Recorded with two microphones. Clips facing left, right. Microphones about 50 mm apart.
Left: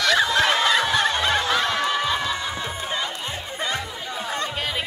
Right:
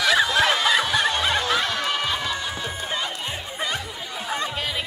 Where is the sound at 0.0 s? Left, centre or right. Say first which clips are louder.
Even; centre.